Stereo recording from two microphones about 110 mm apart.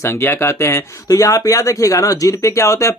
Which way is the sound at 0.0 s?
20° left (ahead or behind).